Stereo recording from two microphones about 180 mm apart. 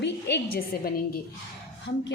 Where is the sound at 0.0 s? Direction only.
70° left (ahead or behind); by 1.2 s 55° left (ahead or behind).